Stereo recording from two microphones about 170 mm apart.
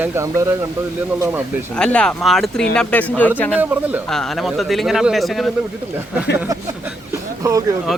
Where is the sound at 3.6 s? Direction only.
10° right (ahead or behind).